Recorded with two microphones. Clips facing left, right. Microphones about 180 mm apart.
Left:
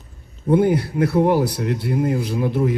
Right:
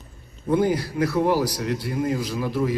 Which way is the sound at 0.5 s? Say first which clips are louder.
Left 4 dB; 60° left (ahead or behind).